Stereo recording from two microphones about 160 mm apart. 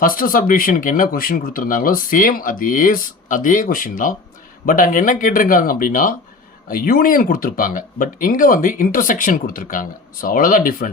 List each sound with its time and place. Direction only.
0.0 s speech: 60° left (ahead or behind)